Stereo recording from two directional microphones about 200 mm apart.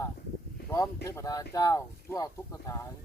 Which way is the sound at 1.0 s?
15° left (ahead or behind).